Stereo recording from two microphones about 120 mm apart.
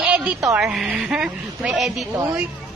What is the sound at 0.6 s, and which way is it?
A woman's voice, 5° right (ahead or behind).